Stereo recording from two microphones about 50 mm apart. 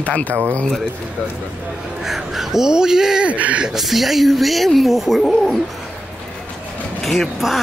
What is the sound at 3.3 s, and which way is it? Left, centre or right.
Speech, right.